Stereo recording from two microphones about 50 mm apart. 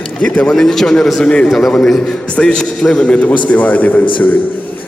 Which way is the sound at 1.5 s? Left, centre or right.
Centre.